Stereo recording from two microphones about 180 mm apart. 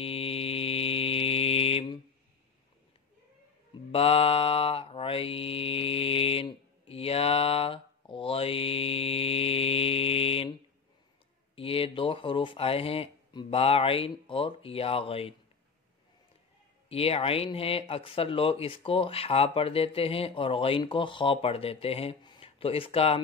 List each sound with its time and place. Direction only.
0.0 s mantra: 35° left (ahead or behind)
3.9 s mantra: 30° left (ahead or behind)
11.5 s speech: 30° left (ahead or behind)
16.9 s speech: 35° left (ahead or behind)